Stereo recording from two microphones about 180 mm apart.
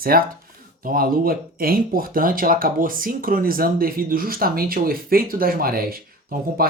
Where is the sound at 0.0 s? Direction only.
55° right (ahead or behind).